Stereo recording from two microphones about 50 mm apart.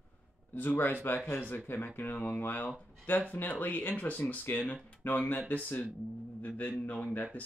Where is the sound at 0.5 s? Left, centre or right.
Left.